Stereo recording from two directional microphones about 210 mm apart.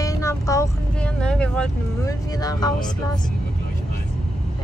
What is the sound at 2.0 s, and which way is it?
Speech, 15° left (ahead or behind).